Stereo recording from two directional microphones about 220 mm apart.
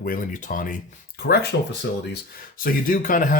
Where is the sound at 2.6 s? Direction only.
40° left (ahead or behind).